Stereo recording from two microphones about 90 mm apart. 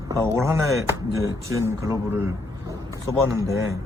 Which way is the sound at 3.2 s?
35° right (ahead or behind).